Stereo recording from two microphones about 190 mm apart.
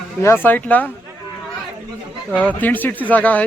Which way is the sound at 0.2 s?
10° left (ahead or behind).